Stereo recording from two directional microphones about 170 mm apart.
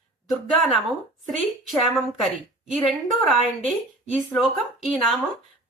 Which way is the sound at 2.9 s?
Centre (ahead or behind).